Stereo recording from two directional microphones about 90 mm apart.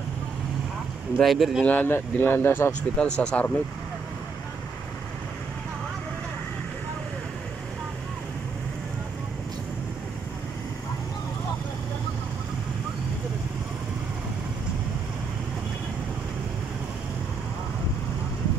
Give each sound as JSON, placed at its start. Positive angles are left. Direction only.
{"t": 1.2, "sound": "speech", "side_deg": 0}
{"t": 1.6, "sound": "speech", "side_deg": 20}
{"t": 3.0, "sound": "speech", "side_deg": 10}